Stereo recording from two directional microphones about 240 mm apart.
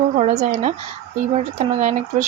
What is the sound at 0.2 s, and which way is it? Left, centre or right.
Speech, right.